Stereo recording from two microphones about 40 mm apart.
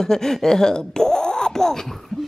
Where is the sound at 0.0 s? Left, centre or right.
Centre.